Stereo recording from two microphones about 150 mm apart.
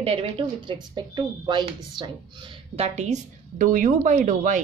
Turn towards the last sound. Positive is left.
turn(degrees=-60)  # may be behind; listen again after turning